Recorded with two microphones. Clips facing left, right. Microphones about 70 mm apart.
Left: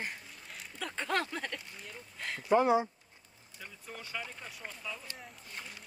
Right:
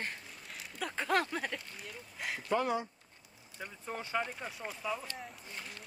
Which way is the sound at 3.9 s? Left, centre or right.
Right.